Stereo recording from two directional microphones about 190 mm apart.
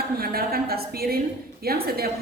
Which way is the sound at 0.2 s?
55° right (ahead or behind).